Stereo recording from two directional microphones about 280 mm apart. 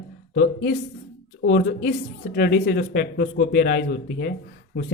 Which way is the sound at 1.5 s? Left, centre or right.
Left.